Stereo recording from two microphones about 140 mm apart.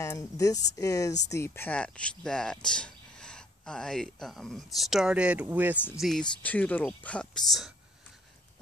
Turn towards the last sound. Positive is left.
turn(degrees=5)  # may be behind; listen again after turning